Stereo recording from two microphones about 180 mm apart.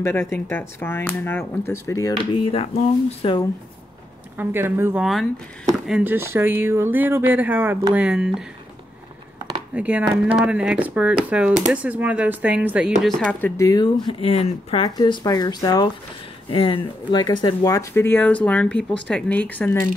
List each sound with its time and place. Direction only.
0.0 s speech: 15° left (ahead or behind); by 3.3 s 35° left (ahead or behind)
4.4 s speech: 10° right (ahead or behind)
9.8 s speech: 5° right (ahead or behind)
13.4 s speech: 15° left (ahead or behind)
14.0 s speech: 35° left (ahead or behind)
15.0 s speech: 20° left (ahead or behind)